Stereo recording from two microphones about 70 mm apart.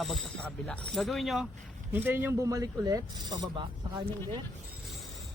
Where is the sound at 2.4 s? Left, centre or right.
Right.